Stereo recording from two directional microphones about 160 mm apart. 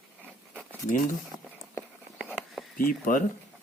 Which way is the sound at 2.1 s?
5° right (ahead or behind).